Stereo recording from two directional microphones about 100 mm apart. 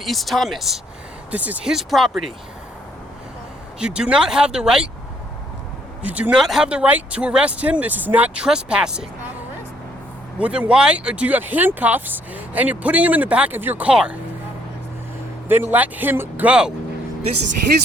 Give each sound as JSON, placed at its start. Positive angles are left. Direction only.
{"t": 0.0, "sound": "speech", "side_deg": 0}
{"t": 1.3, "sound": "speech", "side_deg": -15}
{"t": 1.7, "sound": "speech", "side_deg": 0}
{"t": 3.8, "sound": "speech", "side_deg": -10}
{"t": 6.0, "sound": "speech", "side_deg": -15}
{"t": 6.4, "sound": "speech", "side_deg": -5}
{"t": 10.3, "sound": "speech", "side_deg": -15}
{"t": 15.4, "sound": "speech", "side_deg": -20}
{"t": 16.5, "sound": "speech", "side_deg": -10}